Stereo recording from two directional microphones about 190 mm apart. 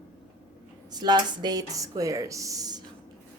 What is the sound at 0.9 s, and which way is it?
Speech, 20° right (ahead or behind).